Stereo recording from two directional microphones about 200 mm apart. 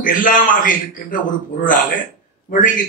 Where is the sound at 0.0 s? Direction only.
45° left (ahead or behind).